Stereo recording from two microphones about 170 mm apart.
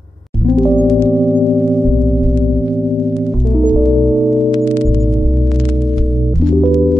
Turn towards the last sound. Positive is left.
turn(degrees=0)  # may be behind; listen again after turning